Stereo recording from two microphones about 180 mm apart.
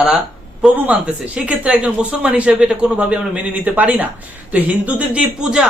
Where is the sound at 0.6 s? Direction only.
5° right (ahead or behind).